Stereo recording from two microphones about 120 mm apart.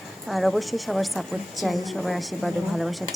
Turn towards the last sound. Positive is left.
turn(degrees=0)  # may be behind; listen again after turning